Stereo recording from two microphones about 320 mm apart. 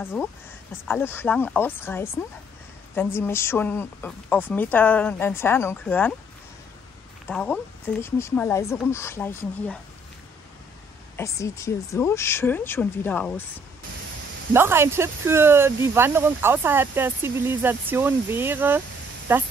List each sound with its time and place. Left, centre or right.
0.0 s a woman's voice: centre
7.2 s a woman's voice: centre
11.1 s a woman's voice: centre
14.5 s speech: centre